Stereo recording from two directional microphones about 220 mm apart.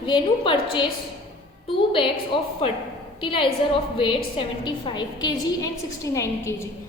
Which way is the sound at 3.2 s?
25° left (ahead or behind).